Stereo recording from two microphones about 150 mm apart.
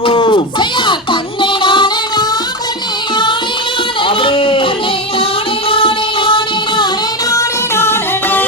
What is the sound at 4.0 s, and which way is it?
Music, 35° left (ahead or behind).